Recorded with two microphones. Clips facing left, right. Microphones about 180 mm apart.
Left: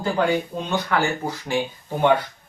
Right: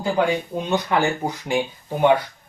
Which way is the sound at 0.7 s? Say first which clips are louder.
Right 2 dB; 15° right (ahead or behind).